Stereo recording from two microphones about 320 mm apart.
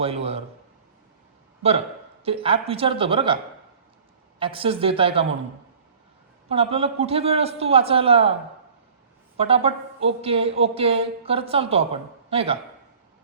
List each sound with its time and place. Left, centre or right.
0.0 s a man's voice: centre
1.6 s a man's voice: centre
4.4 s speech: centre
6.5 s speech: centre
9.4 s speech: centre